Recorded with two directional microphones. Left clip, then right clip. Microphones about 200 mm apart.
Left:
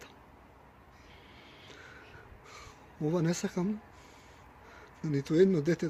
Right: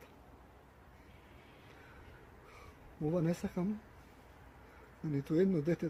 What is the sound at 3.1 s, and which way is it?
Speech, 45° left (ahead or behind).